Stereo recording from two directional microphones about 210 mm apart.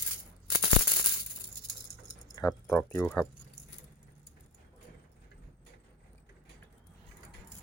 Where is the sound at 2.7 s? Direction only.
10° left (ahead or behind).